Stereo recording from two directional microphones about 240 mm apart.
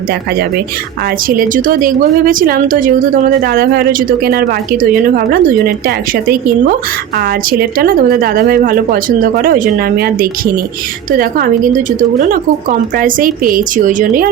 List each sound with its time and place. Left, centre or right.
1.3 s a woman's voice: right